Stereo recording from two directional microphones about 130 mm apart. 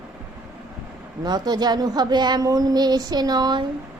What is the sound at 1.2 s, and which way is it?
A woman's voice, 35° right (ahead or behind).